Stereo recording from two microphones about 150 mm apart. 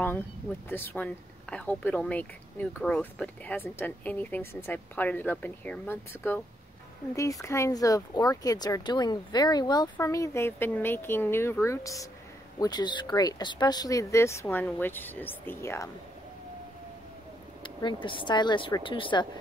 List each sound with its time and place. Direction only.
0.7 s speech: 15° left (ahead or behind)
17.6 s speech: 35° left (ahead or behind)